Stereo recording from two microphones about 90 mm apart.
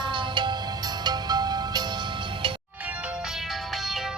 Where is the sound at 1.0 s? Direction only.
50° right (ahead or behind).